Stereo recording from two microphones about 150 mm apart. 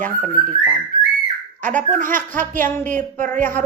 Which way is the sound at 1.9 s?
60° right (ahead or behind).